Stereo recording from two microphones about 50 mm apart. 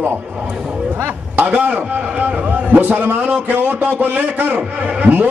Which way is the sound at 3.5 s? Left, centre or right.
Right.